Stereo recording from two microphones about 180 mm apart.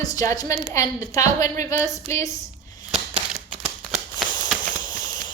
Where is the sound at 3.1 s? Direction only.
40° right (ahead or behind).